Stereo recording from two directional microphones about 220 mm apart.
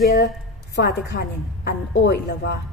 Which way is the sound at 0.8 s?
50° left (ahead or behind).